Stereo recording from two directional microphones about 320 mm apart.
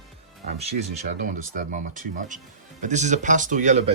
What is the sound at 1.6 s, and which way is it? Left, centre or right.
Speech, right.